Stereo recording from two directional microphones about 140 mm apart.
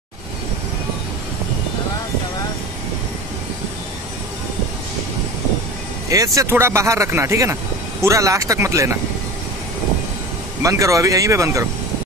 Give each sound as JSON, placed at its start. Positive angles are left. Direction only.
{"t": 6.0, "sound": "speech", "side_deg": -25}
{"t": 10.6, "sound": "speech", "side_deg": -20}